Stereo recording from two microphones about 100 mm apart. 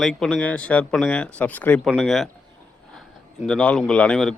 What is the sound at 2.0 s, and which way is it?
A man's voice, centre (ahead or behind).